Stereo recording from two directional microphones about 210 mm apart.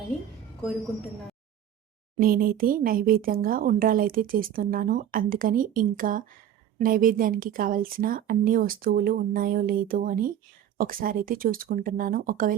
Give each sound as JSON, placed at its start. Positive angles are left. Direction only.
{"t": 2.2, "sound": "speech", "side_deg": -45}